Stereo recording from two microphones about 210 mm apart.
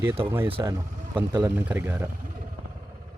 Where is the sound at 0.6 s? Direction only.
15° right (ahead or behind).